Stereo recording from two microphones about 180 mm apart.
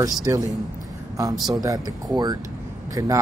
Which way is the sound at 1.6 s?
20° right (ahead or behind).